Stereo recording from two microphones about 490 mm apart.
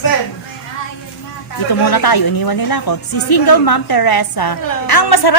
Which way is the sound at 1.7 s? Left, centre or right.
Left.